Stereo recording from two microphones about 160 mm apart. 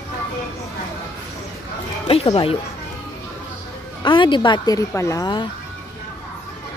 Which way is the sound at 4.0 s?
30° left (ahead or behind).